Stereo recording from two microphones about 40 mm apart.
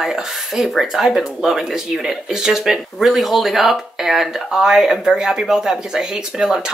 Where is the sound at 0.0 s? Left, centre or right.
Centre.